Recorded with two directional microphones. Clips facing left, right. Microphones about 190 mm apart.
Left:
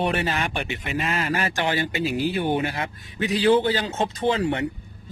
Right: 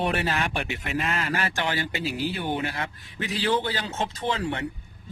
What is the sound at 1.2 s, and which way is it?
Speech, 15° left (ahead or behind).